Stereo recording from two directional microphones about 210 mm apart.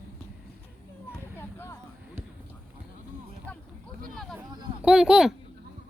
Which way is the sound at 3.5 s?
5° left (ahead or behind).